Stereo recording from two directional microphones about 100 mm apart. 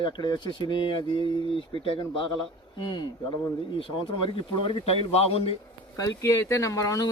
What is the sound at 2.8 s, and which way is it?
Speech, 50° left (ahead or behind).